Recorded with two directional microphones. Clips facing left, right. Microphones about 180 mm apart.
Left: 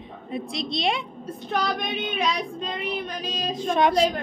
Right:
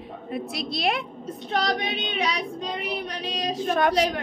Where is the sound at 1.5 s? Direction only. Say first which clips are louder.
Right 1 dB; 80° right; by 4.0 s 60° right (ahead or behind).